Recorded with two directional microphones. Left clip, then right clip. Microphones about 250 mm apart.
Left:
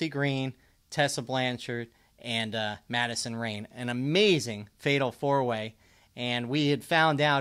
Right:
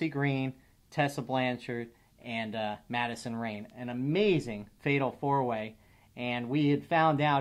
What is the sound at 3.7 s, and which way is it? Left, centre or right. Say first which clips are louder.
Speech: left 5 dB; left.